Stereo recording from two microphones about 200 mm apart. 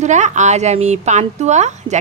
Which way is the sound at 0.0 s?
35° right (ahead or behind).